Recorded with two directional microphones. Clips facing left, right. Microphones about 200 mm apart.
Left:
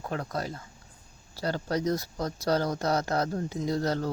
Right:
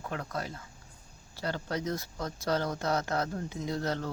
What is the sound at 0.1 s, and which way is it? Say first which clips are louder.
Speech: left 4 dB; 35° left (ahead or behind).